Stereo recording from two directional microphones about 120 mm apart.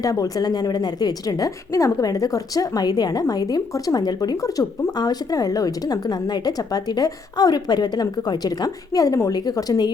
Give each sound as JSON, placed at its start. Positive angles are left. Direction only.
{"t": 0.0, "sound": "a woman's voice", "side_deg": 30}